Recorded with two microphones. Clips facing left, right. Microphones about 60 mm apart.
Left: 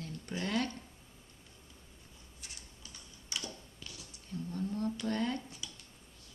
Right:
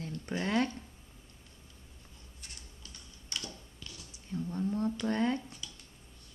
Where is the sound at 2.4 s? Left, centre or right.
Centre.